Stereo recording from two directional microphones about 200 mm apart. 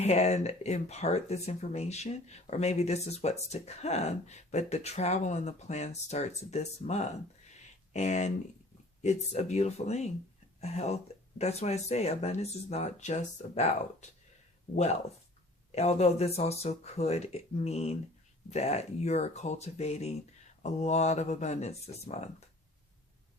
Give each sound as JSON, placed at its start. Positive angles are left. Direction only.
{"t": 0.0, "sound": "speech", "side_deg": 35}
{"t": 7.5, "sound": "a sound", "side_deg": 35}
{"t": 9.0, "sound": "speech", "side_deg": 35}
{"t": 15.7, "sound": "speech", "side_deg": 35}